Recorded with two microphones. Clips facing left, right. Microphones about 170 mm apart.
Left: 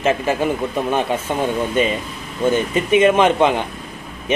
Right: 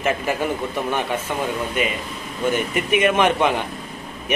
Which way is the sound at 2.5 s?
25° left (ahead or behind).